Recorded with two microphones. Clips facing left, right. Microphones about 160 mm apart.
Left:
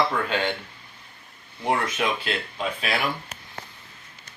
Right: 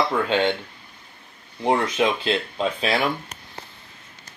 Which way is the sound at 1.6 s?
25° right (ahead or behind).